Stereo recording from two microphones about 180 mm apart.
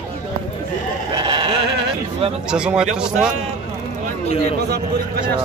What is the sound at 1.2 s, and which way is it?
Sheep, 30° right (ahead or behind).